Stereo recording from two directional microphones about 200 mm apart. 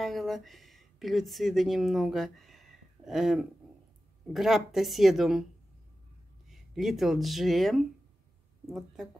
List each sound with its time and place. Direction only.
0.0 s speech: centre (ahead or behind)
6.5 s speech: centre (ahead or behind)